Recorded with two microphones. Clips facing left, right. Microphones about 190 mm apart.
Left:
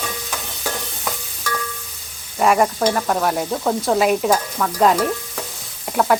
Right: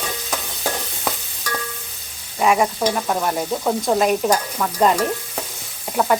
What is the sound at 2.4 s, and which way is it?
Stir, 5° right (ahead or behind).